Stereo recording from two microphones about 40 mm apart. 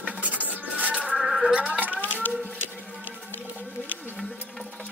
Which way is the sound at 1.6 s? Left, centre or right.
Right.